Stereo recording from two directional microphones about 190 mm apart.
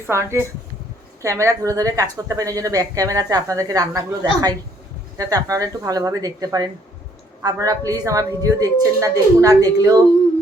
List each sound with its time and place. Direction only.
0.1 s a woman's voice: 15° right (ahead or behind)